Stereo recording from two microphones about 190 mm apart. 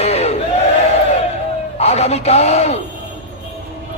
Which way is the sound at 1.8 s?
35° left (ahead or behind).